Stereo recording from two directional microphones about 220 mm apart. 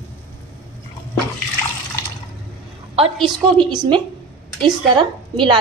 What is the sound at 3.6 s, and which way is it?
A woman's voice, 20° right (ahead or behind).